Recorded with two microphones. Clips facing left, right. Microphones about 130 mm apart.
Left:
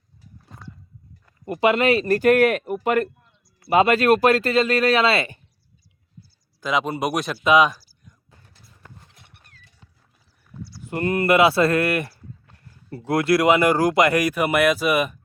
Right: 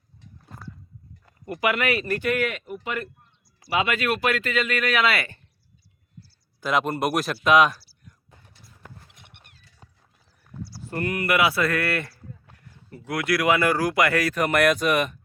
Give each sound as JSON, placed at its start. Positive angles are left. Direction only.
{"t": 0.2, "sound": "a sound", "side_deg": 0}
{"t": 1.5, "sound": "speech", "side_deg": 25}
{"t": 3.7, "sound": "speech", "side_deg": 35}
{"t": 6.6, "sound": "speech", "side_deg": 0}
{"t": 9.8, "sound": "clip-clop", "side_deg": -40}
{"t": 10.8, "sound": "speech", "side_deg": 25}
{"t": 12.5, "sound": "speech", "side_deg": 30}